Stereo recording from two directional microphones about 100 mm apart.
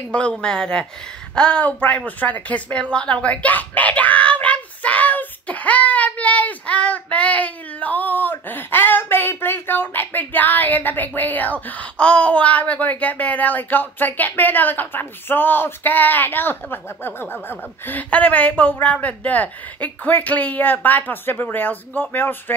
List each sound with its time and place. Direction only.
0.1 s a woman's voice: 10° left (ahead or behind)